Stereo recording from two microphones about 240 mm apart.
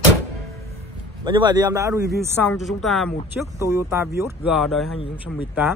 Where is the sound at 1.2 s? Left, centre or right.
Centre.